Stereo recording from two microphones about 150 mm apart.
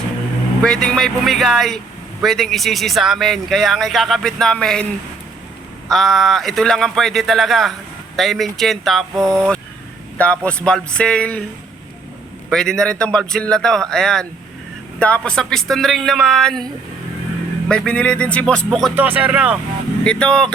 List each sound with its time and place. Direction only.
0.6 s speech: 5° left (ahead or behind)
5.9 s a man's voice: centre (ahead or behind)
12.5 s speech: 5° left (ahead or behind)
17.7 s a man's voice: 5° left (ahead or behind)
18.9 s speech: 10° right (ahead or behind)
20.1 s a man's voice: 5° left (ahead or behind)